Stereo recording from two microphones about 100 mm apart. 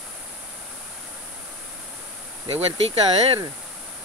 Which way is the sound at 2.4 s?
80° right.